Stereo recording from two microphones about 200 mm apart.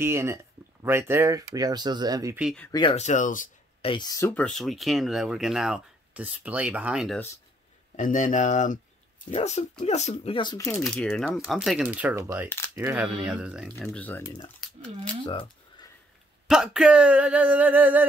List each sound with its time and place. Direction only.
0.0 s speech: 10° right (ahead or behind)
2.3 s speech: 5° right (ahead or behind)
2.7 s speech: 25° left (ahead or behind)
3.8 s speech: 25° left (ahead or behind)
4.2 s speech: 5° left (ahead or behind)
7.9 s speech: 40° left (ahead or behind); by 10.8 s 15° left (ahead or behind)
10.8 s speech: 5° left (ahead or behind)
13.8 s speech: 10° left (ahead or behind)
16.4 s speech: 5° right (ahead or behind)